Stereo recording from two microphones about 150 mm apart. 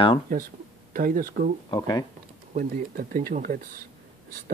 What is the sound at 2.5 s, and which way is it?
Speech, 70° right (ahead or behind).